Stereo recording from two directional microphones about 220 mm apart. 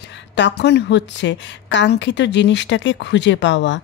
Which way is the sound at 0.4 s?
50° left (ahead or behind).